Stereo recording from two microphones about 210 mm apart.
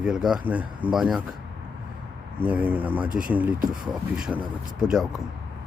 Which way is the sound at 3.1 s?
40° right (ahead or behind).